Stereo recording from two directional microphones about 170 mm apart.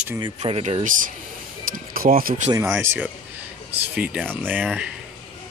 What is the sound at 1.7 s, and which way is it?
Speech, 55° right (ahead or behind).